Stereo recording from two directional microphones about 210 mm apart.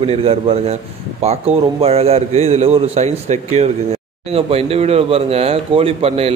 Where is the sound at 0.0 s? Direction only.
30° right (ahead or behind).